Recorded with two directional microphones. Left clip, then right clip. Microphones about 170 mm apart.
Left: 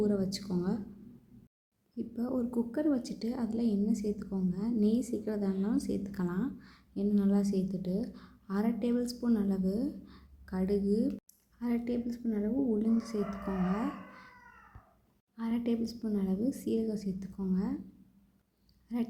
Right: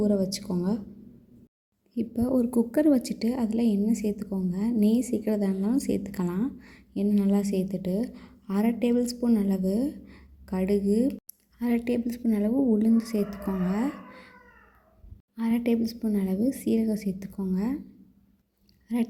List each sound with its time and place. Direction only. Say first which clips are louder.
0.0 s a woman's voice: right 6 dB; 15° right (ahead or behind)
2.0 s a woman's voice: right 9 dB; 25° right (ahead or behind)
15.4 s a woman's voice: right 7 dB; 20° right (ahead or behind)
18.9 s a woman's voice: right 7 dB; 15° right (ahead or behind)